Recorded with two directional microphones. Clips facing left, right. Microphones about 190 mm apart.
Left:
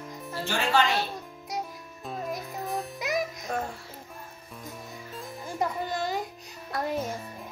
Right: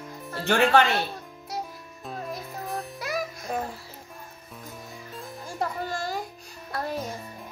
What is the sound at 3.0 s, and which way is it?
Music, 20° left (ahead or behind).